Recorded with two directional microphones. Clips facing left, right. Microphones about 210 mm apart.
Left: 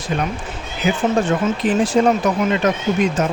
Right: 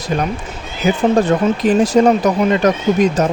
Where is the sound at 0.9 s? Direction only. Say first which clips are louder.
Right 4 dB; 40° right (ahead or behind).